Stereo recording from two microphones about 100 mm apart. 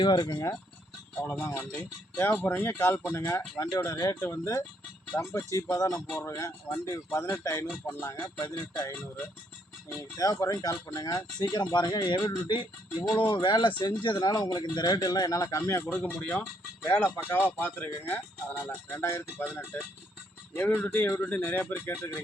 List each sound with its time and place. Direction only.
0.0 s speech: 45° left (ahead or behind)
1.2 s speech: 25° left (ahead or behind)
10.0 s speech: 35° left (ahead or behind)
20.6 s speech: 20° left (ahead or behind)